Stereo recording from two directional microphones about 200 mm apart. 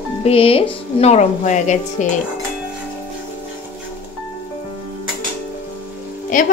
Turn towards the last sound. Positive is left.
turn(degrees=40)  # may be behind; listen again after turning